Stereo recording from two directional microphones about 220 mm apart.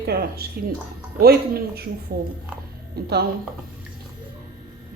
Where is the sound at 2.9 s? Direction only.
45° right (ahead or behind).